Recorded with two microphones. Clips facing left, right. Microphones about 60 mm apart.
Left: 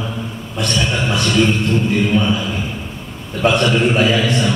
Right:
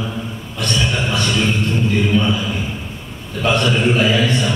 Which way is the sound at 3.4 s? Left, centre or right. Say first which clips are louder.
Left 2 dB; centre.